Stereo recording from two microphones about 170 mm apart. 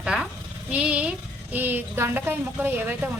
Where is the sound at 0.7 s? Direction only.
5° right (ahead or behind).